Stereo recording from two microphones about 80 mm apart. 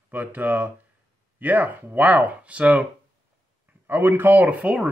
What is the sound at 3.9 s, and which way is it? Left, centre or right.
Speech, right.